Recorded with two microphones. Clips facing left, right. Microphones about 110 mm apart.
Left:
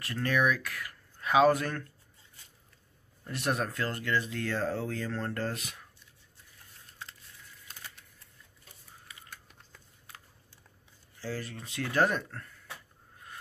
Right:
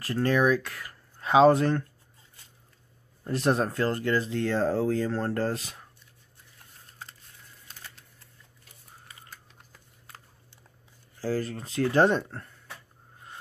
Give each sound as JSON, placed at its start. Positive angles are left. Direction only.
{"t": 0.0, "sound": "speech", "side_deg": -35}
{"t": 3.3, "sound": "speech", "side_deg": -30}
{"t": 11.1, "sound": "speech", "side_deg": -40}